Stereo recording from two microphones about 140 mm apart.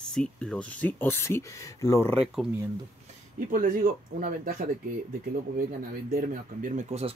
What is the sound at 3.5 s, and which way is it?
Speech, 75° right (ahead or behind).